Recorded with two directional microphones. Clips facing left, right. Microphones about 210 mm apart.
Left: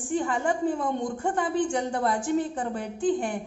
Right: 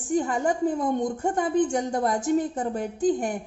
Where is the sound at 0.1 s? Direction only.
40° right (ahead or behind).